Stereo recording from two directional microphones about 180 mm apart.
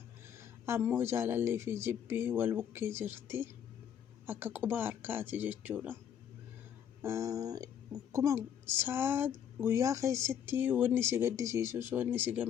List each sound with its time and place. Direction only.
0.3 s speech: 15° right (ahead or behind)
7.0 s speech: 15° right (ahead or behind)